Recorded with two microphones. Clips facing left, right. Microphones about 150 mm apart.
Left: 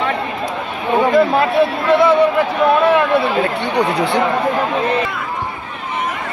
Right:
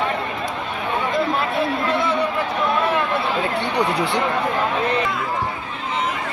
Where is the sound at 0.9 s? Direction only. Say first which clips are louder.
Left 9 dB; 85° left.